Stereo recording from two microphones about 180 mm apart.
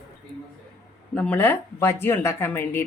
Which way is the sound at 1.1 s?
10° left (ahead or behind).